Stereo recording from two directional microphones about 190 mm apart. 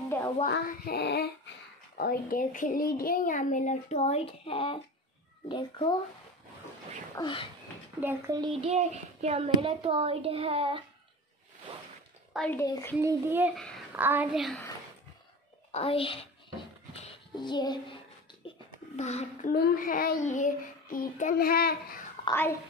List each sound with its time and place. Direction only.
0.5 s a sound: 55° left (ahead or behind)
2.0 s a woman's voice: 50° left (ahead or behind); by 5.9 s 25° left (ahead or behind)
7.2 s a woman's voice: 25° left (ahead or behind)
8.0 s a child's voice: 15° right (ahead or behind); by 10.8 s 30° right (ahead or behind)
12.4 s a woman's voice: 10° left (ahead or behind)
12.6 s a woman's voice: 20° left (ahead or behind)
13.0 s a child's voice: 10° right (ahead or behind)
15.7 s a woman's voice: 30° left (ahead or behind)
16.9 s child singing: 25° left (ahead or behind)
18.9 s speech: 35° left (ahead or behind)
19.5 s speech: 50° left (ahead or behind)
22.3 s a woman's voice: 10° left (ahead or behind)